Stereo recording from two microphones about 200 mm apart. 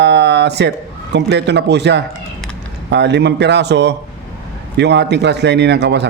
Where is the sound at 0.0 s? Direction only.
60° right (ahead or behind).